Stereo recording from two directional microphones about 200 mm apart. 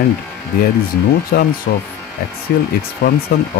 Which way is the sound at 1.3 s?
45° left (ahead or behind).